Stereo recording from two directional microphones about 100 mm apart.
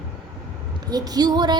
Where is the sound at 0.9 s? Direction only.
40° right (ahead or behind).